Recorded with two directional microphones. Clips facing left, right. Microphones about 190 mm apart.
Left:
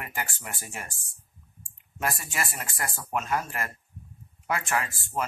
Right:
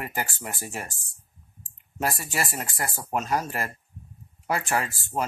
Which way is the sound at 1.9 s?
35° right (ahead or behind).